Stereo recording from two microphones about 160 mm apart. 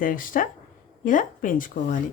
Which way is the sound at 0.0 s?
60° left (ahead or behind).